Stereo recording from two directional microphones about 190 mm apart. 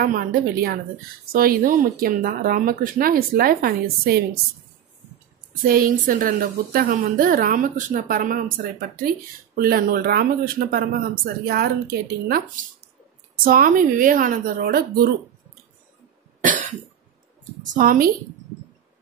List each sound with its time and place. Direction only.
0.0 s a woman's voice: 50° right (ahead or behind)
5.7 s a woman's voice: 50° right (ahead or behind)
16.3 s cough: 40° right (ahead or behind)
17.7 s a woman's voice: 50° right (ahead or behind)